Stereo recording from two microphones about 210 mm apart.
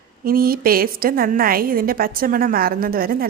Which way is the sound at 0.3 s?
45° right (ahead or behind).